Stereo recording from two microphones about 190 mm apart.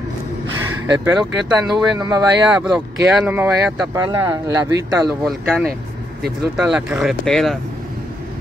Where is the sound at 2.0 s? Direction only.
20° right (ahead or behind).